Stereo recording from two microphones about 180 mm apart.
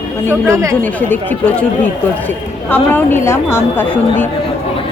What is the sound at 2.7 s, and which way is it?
Speech, 10° left (ahead or behind).